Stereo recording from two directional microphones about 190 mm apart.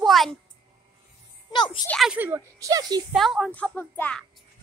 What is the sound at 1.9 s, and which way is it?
Speech, centre (ahead or behind).